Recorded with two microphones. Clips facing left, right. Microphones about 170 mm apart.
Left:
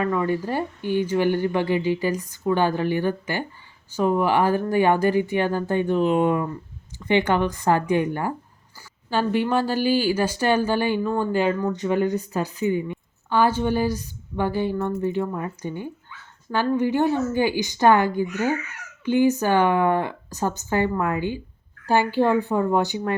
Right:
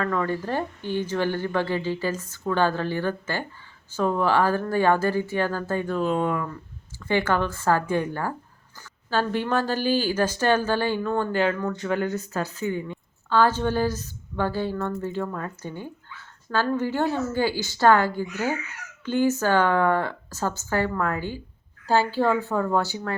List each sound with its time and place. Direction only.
0.0 s speech: 15° left (ahead or behind)